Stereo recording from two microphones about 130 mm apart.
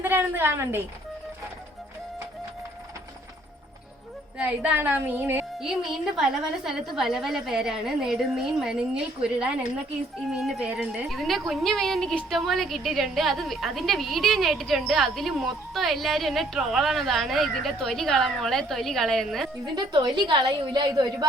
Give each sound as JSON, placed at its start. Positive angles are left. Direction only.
{"t": 0.0, "sound": "speech", "side_deg": -15}
{"t": 4.4, "sound": "speech", "side_deg": -10}
{"t": 5.6, "sound": "a woman's voice", "side_deg": -5}
{"t": 19.6, "sound": "speech", "side_deg": -35}